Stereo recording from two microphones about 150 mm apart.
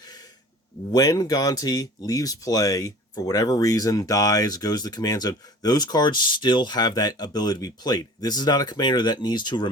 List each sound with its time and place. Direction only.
0.0 s gasp: 25° left (ahead or behind)
0.9 s speech: 25° left (ahead or behind)